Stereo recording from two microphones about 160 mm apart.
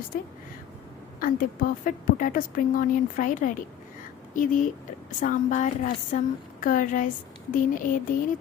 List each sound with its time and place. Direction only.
0.1 s a woman's voice: 65° left (ahead or behind)